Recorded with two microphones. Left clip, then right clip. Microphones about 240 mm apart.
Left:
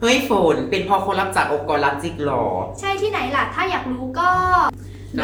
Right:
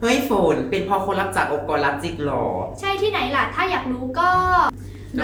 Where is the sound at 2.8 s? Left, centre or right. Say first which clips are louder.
Right 1 dB; centre.